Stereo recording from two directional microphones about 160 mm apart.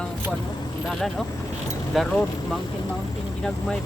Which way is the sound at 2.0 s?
Centre (ahead or behind).